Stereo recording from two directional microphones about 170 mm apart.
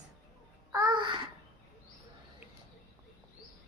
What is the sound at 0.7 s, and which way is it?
Babbling, 25° right (ahead or behind).